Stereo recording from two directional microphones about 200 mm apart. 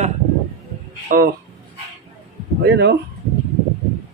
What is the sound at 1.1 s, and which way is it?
Speech, 40° right (ahead or behind).